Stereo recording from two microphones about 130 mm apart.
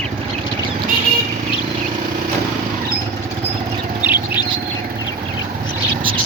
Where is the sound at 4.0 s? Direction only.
15° right (ahead or behind).